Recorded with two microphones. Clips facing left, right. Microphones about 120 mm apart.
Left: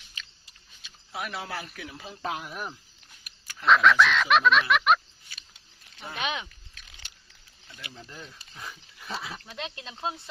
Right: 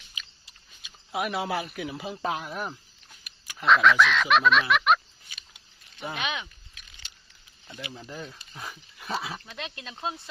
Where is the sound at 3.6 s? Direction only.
Centre (ahead or behind).